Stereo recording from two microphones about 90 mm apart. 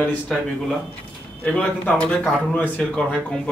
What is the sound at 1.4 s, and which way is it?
Speech, 15° left (ahead or behind).